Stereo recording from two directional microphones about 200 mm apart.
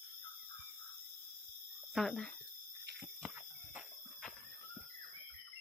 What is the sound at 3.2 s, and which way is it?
Fire alarm, 5° right (ahead or behind).